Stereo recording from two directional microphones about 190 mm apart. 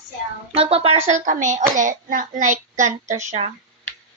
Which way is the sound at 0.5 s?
30° right (ahead or behind).